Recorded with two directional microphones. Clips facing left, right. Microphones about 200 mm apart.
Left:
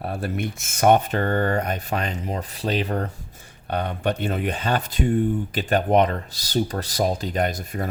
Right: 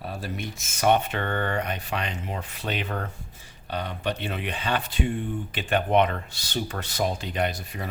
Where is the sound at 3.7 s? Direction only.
55° left (ahead or behind).